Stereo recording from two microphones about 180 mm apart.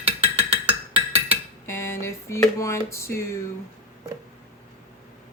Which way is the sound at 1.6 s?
15° left (ahead or behind).